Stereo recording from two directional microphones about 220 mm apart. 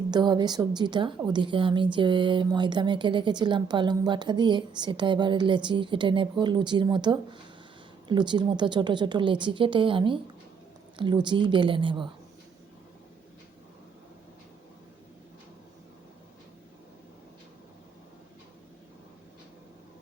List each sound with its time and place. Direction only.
0.1 s a woman's voice: 20° right (ahead or behind)